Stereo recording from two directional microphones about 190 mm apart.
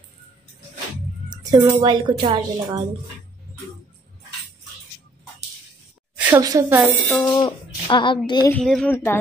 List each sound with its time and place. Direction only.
1.3 s music: 20° right (ahead or behind)
1.8 s speech: 20° right (ahead or behind)
6.1 s a sound: 10° right (ahead or behind)
6.4 s speech: 15° right (ahead or behind)
7.2 s a sound: 20° left (ahead or behind)
8.3 s speech: 20° left (ahead or behind)
8.5 s a woman's voice: 5° left (ahead or behind)